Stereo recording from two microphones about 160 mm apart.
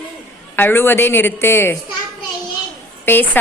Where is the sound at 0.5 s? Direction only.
15° left (ahead or behind).